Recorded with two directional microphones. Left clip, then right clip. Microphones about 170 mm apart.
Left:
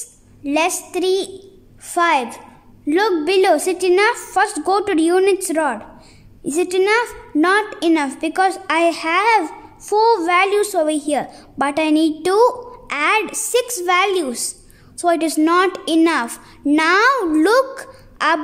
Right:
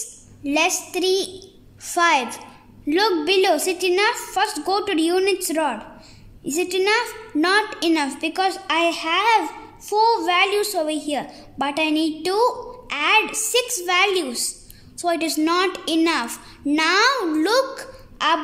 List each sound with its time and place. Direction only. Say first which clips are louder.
0.4 s a woman's voice: left 2 dB; 15° left (ahead or behind); by 18.4 s 35° left (ahead or behind)